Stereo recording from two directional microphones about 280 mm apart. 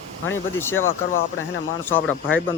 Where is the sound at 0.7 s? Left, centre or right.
Left.